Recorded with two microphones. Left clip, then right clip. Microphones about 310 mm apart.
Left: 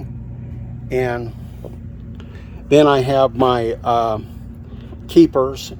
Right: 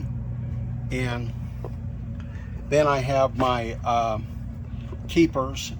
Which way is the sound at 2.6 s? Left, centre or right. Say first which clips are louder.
Left 9 dB; left.